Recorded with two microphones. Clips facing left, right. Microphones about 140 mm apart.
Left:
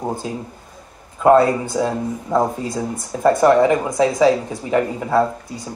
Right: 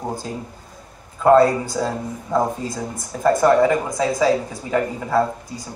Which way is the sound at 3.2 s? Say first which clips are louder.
Left 2 dB; 25° left (ahead or behind).